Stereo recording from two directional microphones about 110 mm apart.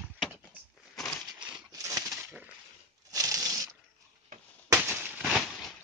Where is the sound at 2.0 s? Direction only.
5° right (ahead or behind).